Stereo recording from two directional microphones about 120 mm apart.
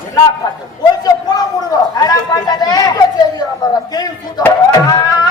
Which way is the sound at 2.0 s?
35° left (ahead or behind).